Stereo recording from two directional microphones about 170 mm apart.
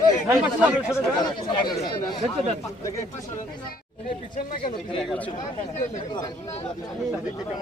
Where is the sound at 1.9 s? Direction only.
25° left (ahead or behind).